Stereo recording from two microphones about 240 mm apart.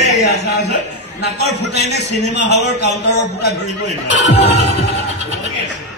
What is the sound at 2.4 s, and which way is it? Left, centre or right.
A man's voice, left.